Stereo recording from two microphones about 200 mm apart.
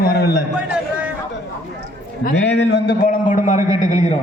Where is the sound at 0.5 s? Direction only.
5° right (ahead or behind).